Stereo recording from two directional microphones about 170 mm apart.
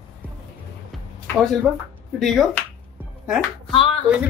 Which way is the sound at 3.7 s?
35° left (ahead or behind).